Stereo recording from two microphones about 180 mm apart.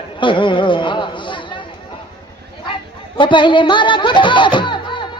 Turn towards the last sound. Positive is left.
turn(degrees=25)  # may be behind; listen again after turning